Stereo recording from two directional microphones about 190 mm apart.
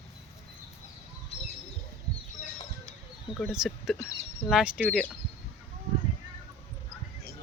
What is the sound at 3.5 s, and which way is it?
Speech, 5° right (ahead or behind).